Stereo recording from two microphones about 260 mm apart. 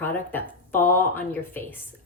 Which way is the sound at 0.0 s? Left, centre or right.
Centre.